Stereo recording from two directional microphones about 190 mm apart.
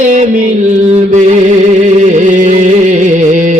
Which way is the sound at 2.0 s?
40° right (ahead or behind).